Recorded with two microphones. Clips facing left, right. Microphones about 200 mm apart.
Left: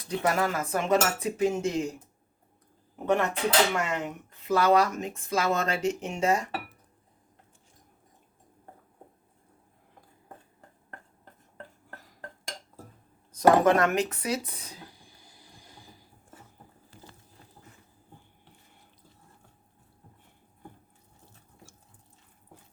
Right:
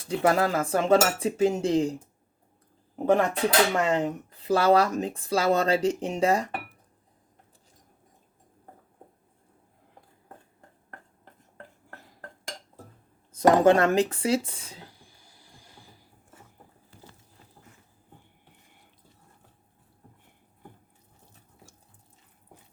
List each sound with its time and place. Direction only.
0.0 s speech: 30° right (ahead or behind)
2.9 s speech: 35° right (ahead or behind)
13.3 s speech: 30° right (ahead or behind)
15.0 s a sound: 15° left (ahead or behind)